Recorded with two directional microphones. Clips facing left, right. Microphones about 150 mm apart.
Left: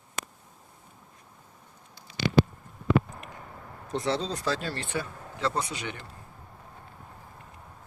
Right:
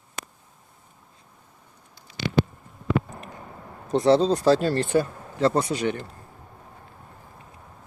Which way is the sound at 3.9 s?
35° right (ahead or behind).